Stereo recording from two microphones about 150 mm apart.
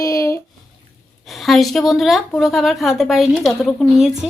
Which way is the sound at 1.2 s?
Centre (ahead or behind).